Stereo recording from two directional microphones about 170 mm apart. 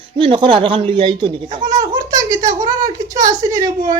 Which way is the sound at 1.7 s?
50° right (ahead or behind).